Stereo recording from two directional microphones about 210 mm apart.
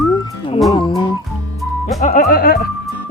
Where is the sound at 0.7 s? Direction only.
20° left (ahead or behind).